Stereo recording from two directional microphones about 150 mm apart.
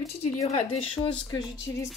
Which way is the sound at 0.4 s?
45° left (ahead or behind).